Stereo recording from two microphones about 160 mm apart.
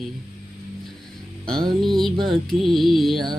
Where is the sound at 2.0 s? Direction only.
Centre (ahead or behind).